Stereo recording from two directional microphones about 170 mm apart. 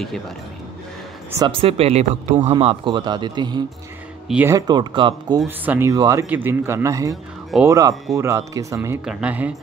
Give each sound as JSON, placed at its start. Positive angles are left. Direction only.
{"t": 1.5, "sound": "speech", "side_deg": -35}
{"t": 4.3, "sound": "a man's voice", "side_deg": -10}
{"t": 4.6, "sound": "speech", "side_deg": -25}
{"t": 5.4, "sound": "a man's voice", "side_deg": -10}
{"t": 7.5, "sound": "speech", "side_deg": 0}
{"t": 8.1, "sound": "a man's voice", "side_deg": -15}
{"t": 9.0, "sound": "a man's voice", "side_deg": -5}